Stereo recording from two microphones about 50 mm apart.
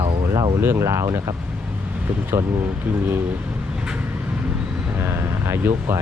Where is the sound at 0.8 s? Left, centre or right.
Right.